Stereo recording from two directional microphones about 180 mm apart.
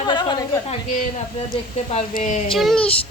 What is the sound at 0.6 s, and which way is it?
Speech, 45° left (ahead or behind).